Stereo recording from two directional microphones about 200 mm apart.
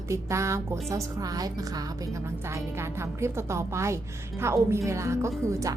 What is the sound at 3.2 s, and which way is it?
A woman's voice, 15° right (ahead or behind).